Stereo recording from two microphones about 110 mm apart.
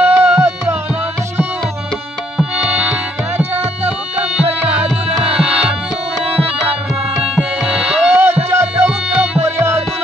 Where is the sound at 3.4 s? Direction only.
15° right (ahead or behind).